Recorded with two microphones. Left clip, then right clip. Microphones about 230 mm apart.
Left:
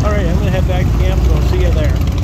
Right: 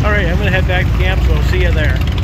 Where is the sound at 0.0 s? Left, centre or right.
Centre.